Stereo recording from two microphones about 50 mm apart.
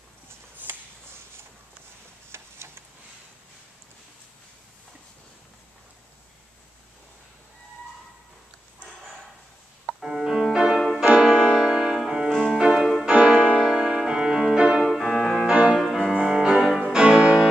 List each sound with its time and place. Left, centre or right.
2.3 s a sound: right
9.8 s music: centre
11.1 s piano: centre
12.3 s music: centre
14.8 s music: centre